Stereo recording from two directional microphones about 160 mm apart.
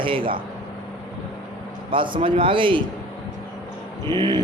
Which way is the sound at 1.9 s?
30° right (ahead or behind).